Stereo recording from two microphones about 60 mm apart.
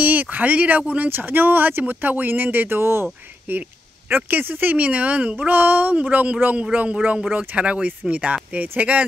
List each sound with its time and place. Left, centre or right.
0.0 s speech: right
3.5 s speech: right